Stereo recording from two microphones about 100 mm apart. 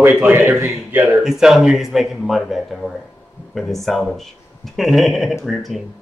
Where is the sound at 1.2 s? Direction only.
5° right (ahead or behind).